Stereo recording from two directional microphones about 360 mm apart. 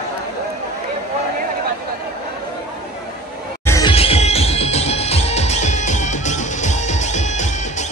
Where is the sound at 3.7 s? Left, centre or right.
Centre.